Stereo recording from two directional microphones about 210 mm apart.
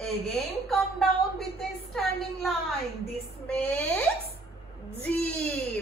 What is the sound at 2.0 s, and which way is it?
A woman's voice, centre (ahead or behind).